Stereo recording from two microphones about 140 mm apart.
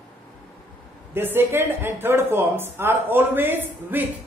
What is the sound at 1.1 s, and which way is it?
Speech, 15° right (ahead or behind).